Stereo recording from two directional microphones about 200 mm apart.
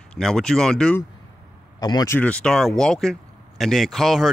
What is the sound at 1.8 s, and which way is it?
Speech, 20° left (ahead or behind).